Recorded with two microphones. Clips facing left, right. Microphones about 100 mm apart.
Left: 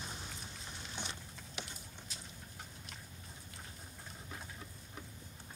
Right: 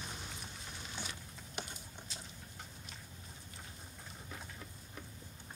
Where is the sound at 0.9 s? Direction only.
25° left (ahead or behind).